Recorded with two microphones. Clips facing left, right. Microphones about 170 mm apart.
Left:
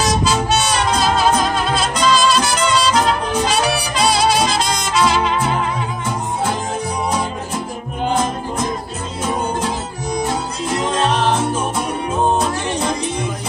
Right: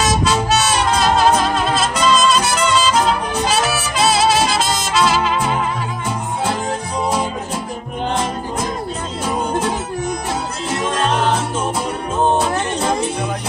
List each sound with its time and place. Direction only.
0.0 s music: centre (ahead or behind)
10.8 s music: 20° left (ahead or behind)